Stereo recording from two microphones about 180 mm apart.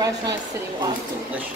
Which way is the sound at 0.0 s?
20° right (ahead or behind).